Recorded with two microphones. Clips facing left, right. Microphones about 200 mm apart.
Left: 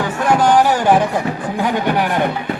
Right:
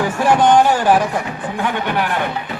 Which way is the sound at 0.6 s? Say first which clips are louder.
Even; 10° left (ahead or behind).